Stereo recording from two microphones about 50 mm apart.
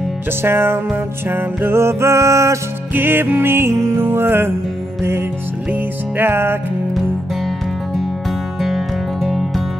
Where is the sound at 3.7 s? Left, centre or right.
Right.